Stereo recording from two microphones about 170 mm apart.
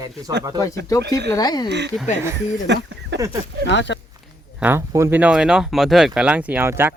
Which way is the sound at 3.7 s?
90° left.